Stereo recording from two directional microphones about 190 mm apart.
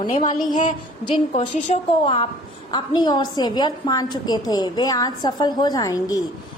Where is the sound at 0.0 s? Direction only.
25° left (ahead or behind).